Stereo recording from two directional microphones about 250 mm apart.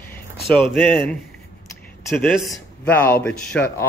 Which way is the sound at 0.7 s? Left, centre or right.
Centre.